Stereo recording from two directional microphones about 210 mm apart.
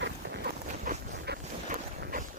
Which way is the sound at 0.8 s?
45° right (ahead or behind).